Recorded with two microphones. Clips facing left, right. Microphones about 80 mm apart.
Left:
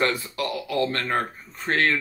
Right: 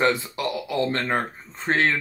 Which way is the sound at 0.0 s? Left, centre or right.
Right.